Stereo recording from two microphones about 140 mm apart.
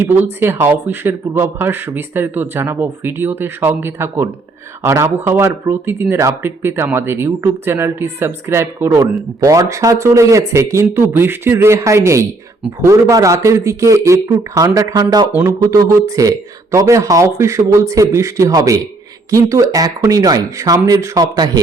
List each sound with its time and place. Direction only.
0.0 s speech: 15° right (ahead or behind)